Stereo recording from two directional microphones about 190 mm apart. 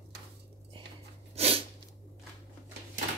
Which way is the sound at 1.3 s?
30° right (ahead or behind).